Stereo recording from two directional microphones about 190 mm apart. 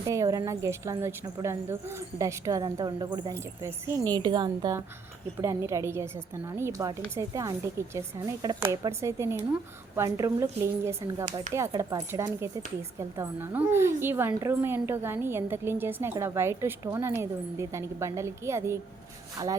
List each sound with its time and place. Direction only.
0.1 s a woman's voice: 15° right (ahead or behind)